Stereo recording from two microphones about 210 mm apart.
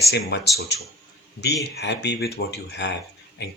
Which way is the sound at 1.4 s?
55° left (ahead or behind).